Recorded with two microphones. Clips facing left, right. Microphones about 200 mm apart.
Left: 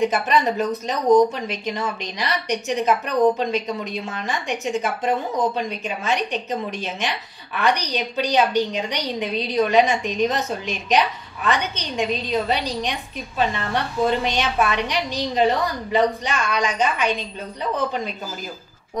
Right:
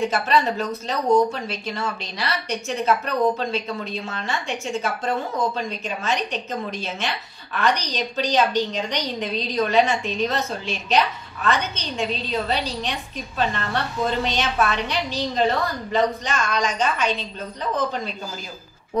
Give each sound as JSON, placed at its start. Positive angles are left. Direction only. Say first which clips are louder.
{"t": 0.1, "sound": "a woman's voice", "louder": "left 1 dB", "side_deg": 15}